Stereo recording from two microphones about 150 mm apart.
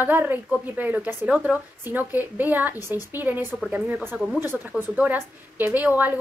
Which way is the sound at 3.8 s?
15° right (ahead or behind).